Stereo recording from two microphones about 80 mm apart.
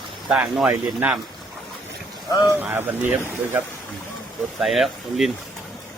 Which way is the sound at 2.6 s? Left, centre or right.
Right.